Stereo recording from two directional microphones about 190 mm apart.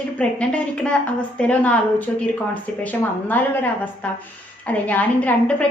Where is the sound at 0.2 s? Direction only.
5° left (ahead or behind).